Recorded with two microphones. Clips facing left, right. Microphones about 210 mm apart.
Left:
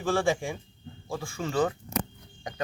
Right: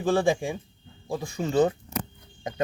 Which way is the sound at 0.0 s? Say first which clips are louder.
Right 3 dB; 20° right (ahead or behind).